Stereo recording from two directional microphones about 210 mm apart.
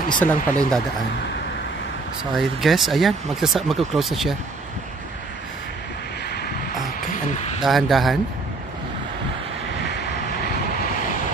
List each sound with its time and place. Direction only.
0.2 s speech: 5° left (ahead or behind)
2.3 s speech: centre (ahead or behind)
7.1 s a sound: 35° left (ahead or behind)
7.6 s speech: centre (ahead or behind)